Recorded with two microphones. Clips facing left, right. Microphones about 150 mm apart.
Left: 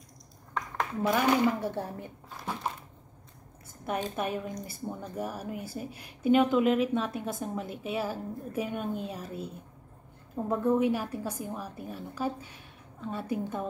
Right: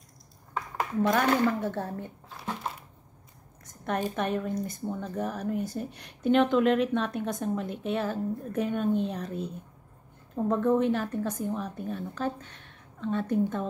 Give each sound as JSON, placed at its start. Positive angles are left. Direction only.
{"t": 1.0, "sound": "a woman's voice", "side_deg": 10}
{"t": 3.6, "sound": "a sound", "side_deg": 5}
{"t": 4.1, "sound": "a woman's voice", "side_deg": 10}